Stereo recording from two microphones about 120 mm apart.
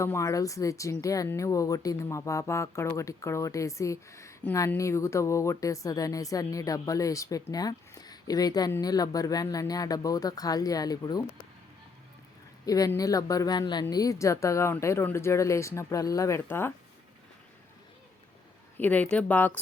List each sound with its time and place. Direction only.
0.0 s speech: 25° left (ahead or behind)
12.6 s speech: 30° left (ahead or behind)
18.8 s speech: 15° left (ahead or behind)